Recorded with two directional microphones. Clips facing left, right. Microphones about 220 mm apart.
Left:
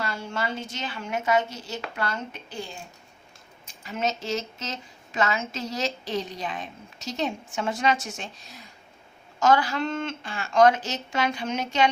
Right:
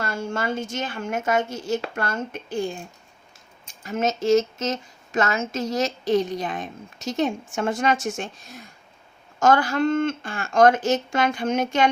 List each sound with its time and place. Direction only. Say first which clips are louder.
0.0 s a woman's voice: right 4 dB; 45° right (ahead or behind)
3.8 s a woman's voice: right 8 dB; 45° right (ahead or behind)